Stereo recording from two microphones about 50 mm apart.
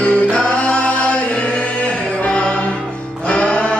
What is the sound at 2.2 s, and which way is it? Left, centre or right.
Music, left.